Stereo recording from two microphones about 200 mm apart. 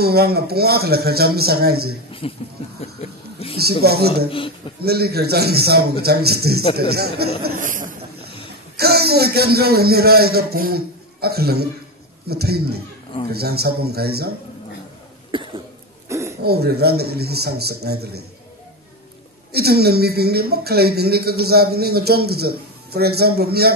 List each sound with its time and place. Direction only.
0.0 s speech: 50° right (ahead or behind)
2.2 s speech: 30° left (ahead or behind)
2.8 s a sound: 30° left (ahead or behind)
3.8 s speech: 50° right (ahead or behind)
8.7 s a man's voice: 50° right (ahead or behind)
15.3 s cough: 25° right (ahead or behind)
16.1 s throat clearing: 15° right (ahead or behind)
16.4 s speech: 50° right (ahead or behind)
19.5 s speech: 50° right (ahead or behind)